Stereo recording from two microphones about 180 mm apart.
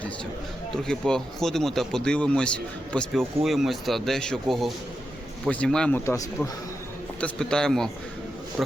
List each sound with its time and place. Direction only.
0.8 s speech: 5° left (ahead or behind)
6.1 s speech: 20° left (ahead or behind)
7.2 s speech: 5° left (ahead or behind)